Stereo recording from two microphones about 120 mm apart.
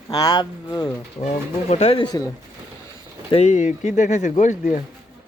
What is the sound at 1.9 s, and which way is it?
Speech, 35° left (ahead or behind).